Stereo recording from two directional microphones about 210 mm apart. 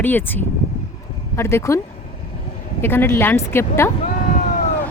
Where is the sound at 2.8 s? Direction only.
10° left (ahead or behind).